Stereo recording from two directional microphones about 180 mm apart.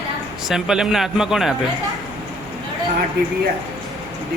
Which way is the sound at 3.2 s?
65° right (ahead or behind).